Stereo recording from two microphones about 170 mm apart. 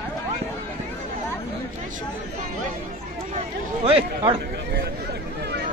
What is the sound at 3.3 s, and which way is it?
Run, 35° right (ahead or behind).